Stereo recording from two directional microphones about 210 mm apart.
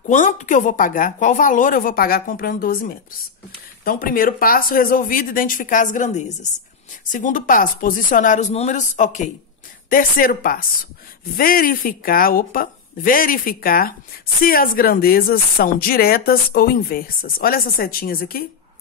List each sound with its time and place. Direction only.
0.1 s a woman's voice: 35° left (ahead or behind)